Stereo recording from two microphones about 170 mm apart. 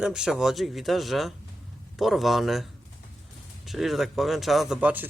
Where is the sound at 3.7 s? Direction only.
Centre (ahead or behind).